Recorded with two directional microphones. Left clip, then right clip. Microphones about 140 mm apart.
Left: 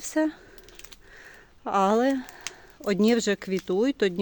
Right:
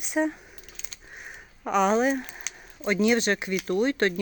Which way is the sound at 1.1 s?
10° left (ahead or behind).